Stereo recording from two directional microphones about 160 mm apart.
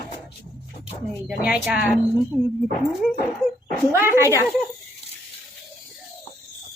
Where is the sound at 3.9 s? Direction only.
15° right (ahead or behind).